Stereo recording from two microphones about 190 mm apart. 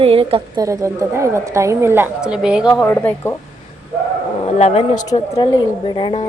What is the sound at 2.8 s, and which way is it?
Speech, 10° left (ahead or behind).